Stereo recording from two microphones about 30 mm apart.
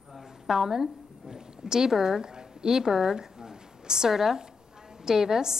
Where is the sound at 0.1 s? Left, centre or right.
Centre.